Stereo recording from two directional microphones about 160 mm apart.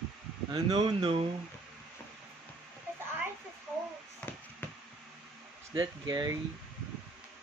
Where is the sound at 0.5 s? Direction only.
25° right (ahead or behind).